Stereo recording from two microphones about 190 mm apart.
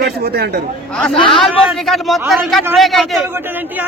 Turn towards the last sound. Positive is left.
turn(degrees=0)  # may be behind; listen again after turning